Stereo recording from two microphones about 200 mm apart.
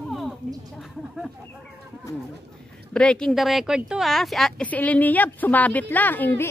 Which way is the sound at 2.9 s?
5° left (ahead or behind).